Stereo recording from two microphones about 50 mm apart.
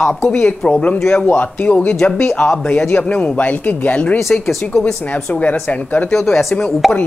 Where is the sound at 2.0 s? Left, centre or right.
Centre.